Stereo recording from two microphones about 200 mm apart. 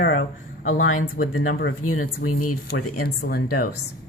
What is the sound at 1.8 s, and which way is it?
Speech, 90° left.